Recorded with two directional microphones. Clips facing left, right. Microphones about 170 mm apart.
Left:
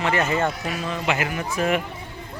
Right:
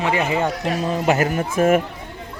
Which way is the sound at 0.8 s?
40° right (ahead or behind).